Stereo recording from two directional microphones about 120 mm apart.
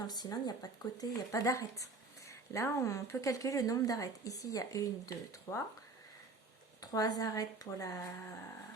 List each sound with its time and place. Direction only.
0.1 s speech: 35° left (ahead or behind)
6.8 s speech: 30° left (ahead or behind)